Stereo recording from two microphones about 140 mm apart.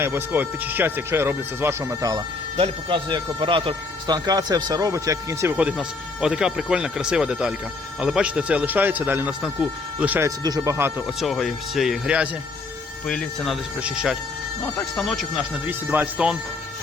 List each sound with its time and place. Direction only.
0.0 s speech: 15° right (ahead or behind)
2.6 s speech: 35° right (ahead or behind); by 5.5 s 20° right (ahead or behind)
5.5 s speech: 5° right (ahead or behind)
10.2 s speech: 25° right (ahead or behind)
11.0 s speech: centre (ahead or behind)
13.1 s speech: 5° left (ahead or behind)
13.8 s speech: 5° right (ahead or behind)
15.6 s speech: 15° right (ahead or behind)